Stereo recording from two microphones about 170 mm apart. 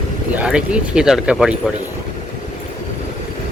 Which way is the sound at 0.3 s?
5° right (ahead or behind).